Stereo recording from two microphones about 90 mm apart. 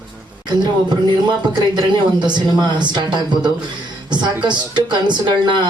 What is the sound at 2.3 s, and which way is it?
Speech, 55° right (ahead or behind).